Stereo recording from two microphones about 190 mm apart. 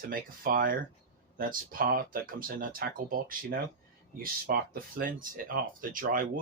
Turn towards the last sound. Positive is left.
turn(degrees=-45)  # may be behind; listen again after turning